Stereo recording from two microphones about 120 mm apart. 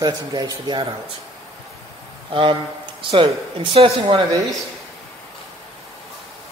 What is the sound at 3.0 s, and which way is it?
Speech, 45° right (ahead or behind).